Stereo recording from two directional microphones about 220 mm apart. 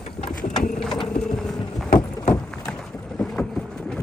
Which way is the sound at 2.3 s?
5° left (ahead or behind).